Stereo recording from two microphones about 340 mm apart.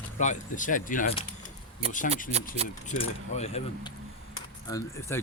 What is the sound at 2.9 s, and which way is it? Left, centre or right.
Speech, centre.